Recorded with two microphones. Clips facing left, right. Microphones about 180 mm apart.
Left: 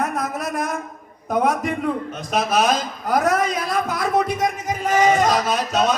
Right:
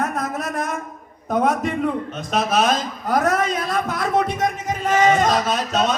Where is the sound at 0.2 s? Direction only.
15° left (ahead or behind).